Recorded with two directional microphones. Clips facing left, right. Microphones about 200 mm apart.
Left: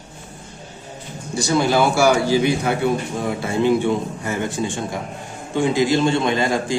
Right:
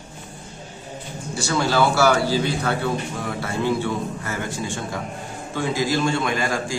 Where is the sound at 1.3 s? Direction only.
20° left (ahead or behind).